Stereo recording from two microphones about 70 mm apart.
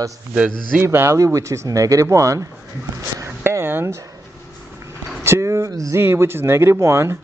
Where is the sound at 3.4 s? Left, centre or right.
Right.